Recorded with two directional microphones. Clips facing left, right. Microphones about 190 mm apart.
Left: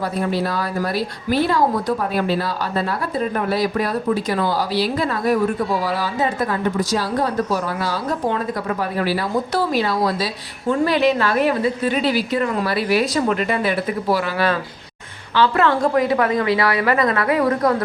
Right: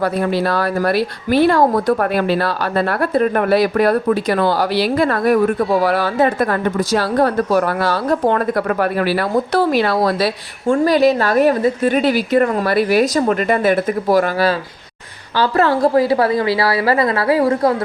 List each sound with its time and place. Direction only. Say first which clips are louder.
0.0 s speech: right 4 dB; 70° right (ahead or behind)
10.8 s a woman's voice: right 4 dB; 40° right (ahead or behind)